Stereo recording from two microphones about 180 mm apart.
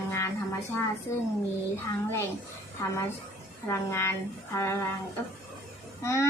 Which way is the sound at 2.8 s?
15° left (ahead or behind).